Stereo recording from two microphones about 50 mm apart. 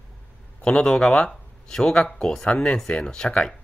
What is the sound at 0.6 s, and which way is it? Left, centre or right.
Speech, centre.